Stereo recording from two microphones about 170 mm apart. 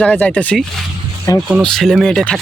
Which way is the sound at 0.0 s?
5° left (ahead or behind).